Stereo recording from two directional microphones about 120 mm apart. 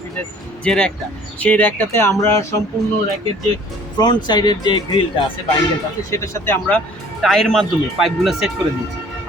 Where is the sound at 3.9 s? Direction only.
40° left (ahead or behind).